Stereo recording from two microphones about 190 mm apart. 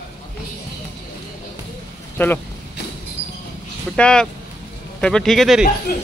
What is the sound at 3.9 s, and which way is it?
Speech, 5° left (ahead or behind).